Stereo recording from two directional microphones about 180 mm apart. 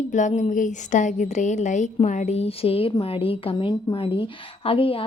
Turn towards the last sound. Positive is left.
turn(degrees=30)  # may be behind; listen again after turning